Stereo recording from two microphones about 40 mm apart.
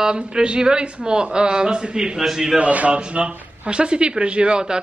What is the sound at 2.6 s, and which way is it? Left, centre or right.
Speech, right.